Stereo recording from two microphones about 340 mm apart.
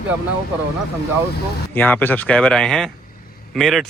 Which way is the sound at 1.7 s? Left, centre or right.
Centre.